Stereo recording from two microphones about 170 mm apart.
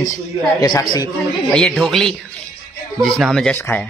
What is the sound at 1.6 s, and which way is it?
Speech, 5° left (ahead or behind).